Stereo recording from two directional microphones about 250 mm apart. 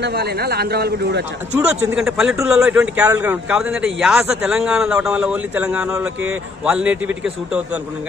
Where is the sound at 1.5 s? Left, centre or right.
Centre.